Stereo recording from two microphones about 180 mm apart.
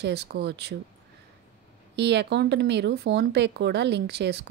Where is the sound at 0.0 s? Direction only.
65° right (ahead or behind).